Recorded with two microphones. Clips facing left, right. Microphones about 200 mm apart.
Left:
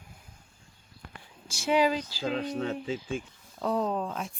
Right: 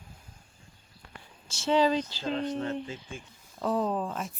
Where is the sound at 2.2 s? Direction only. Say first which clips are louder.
Even; 90° left.